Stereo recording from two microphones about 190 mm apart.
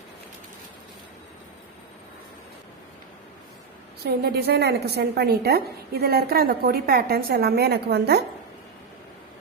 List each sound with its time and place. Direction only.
4.0 s a woman's voice: 55° right (ahead or behind)